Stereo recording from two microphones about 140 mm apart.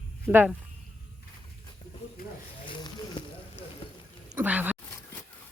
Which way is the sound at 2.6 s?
35° left (ahead or behind).